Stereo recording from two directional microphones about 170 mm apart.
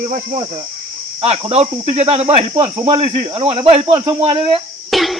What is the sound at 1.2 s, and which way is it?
Speech, 35° right (ahead or behind).